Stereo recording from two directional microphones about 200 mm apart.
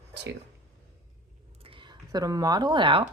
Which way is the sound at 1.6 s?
25° right (ahead or behind).